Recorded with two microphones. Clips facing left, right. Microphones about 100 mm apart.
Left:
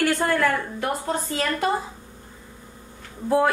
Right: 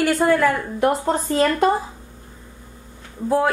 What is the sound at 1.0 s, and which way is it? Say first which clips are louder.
Speech: right 7 dB; 40° right (ahead or behind).